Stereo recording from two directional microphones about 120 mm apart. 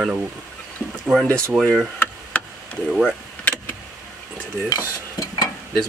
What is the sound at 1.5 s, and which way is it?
Speech, centre (ahead or behind).